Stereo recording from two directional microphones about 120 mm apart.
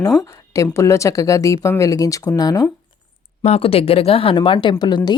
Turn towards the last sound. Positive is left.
turn(degrees=35)  # may be behind; listen again after turning